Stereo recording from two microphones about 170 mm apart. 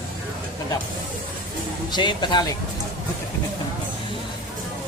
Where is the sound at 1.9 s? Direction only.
25° left (ahead or behind).